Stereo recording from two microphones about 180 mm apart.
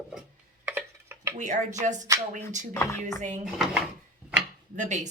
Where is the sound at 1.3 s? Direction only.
40° right (ahead or behind).